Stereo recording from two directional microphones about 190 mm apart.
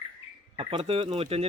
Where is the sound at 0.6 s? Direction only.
30° right (ahead or behind).